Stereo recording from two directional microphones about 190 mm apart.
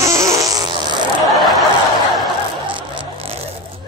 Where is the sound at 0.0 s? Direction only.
15° right (ahead or behind).